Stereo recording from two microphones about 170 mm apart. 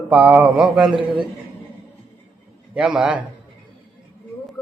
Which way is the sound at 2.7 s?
5° right (ahead or behind).